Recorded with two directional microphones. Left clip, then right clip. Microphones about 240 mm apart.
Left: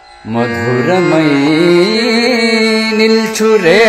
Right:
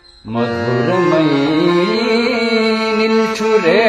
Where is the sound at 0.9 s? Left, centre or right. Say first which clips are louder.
Left 3 dB; left.